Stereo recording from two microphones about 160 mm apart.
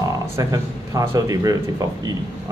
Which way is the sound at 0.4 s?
20° right (ahead or behind).